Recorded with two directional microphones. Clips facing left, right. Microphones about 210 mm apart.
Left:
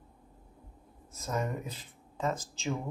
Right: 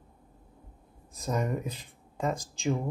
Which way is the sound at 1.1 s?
15° right (ahead or behind).